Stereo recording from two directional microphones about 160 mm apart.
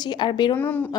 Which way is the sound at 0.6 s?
10° left (ahead or behind).